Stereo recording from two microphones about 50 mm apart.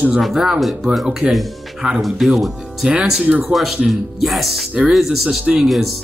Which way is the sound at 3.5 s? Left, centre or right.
Centre.